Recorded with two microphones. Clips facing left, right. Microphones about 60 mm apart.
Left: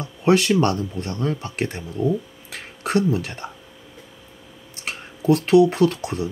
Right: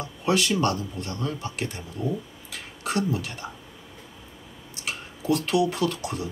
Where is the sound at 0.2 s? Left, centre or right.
Left.